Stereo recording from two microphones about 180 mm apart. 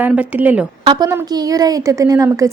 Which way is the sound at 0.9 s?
20° right (ahead or behind).